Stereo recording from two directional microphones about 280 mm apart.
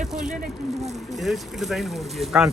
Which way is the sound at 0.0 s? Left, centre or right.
Centre.